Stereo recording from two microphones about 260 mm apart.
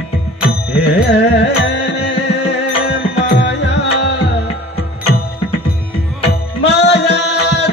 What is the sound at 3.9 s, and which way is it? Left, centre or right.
Music, left.